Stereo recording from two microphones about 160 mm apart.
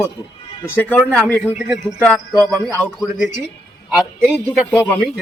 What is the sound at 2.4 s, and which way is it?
Speech, 25° right (ahead or behind).